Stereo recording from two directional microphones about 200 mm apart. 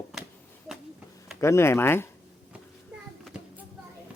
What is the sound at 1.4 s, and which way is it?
Speech, 15° left (ahead or behind).